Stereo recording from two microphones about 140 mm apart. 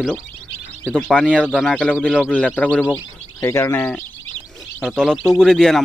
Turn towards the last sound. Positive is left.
turn(degrees=5)  # may be behind; listen again after turning